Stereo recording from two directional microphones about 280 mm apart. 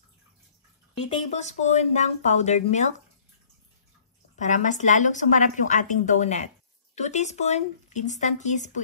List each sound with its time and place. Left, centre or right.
1.0 s speech: left
4.4 s speech: left